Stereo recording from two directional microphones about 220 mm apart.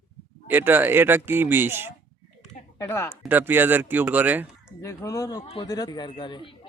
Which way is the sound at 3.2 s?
10° right (ahead or behind).